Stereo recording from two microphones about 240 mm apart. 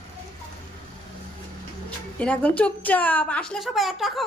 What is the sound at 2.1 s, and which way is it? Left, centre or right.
A woman's voice, centre.